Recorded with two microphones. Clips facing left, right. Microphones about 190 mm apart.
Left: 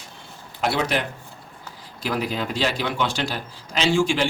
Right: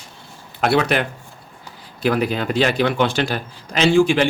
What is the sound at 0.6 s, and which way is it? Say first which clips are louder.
A man's voice: right 5 dB; 60° right (ahead or behind).